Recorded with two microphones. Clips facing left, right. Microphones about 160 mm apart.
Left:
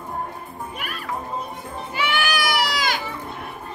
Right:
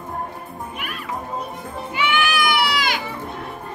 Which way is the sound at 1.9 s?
40° left (ahead or behind).